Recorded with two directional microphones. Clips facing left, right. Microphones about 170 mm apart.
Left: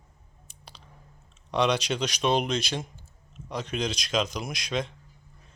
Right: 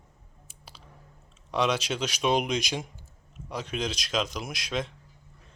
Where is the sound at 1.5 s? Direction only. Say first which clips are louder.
Left 2 dB; 5° right (ahead or behind).